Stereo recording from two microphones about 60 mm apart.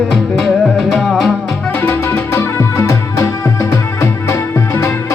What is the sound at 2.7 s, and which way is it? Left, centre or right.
Music, left.